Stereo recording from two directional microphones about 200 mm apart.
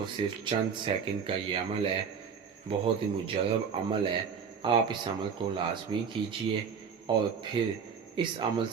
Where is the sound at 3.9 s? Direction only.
25° right (ahead or behind).